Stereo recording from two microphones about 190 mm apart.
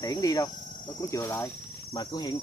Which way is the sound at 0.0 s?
20° left (ahead or behind).